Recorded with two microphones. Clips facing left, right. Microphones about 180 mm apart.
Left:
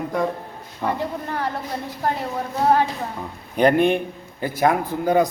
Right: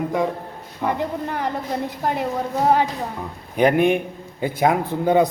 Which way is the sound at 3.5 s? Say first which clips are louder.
Even; 10° right (ahead or behind).